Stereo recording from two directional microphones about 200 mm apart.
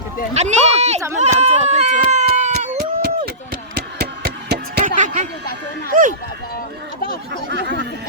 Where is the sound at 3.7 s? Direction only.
55° right (ahead or behind).